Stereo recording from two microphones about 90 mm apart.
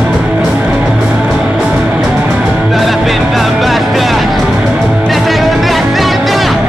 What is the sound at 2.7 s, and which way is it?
Music, centre (ahead or behind).